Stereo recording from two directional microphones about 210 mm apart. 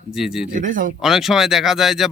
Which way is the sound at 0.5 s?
40° right (ahead or behind).